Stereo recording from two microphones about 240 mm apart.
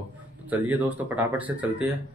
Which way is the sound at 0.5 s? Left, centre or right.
Centre.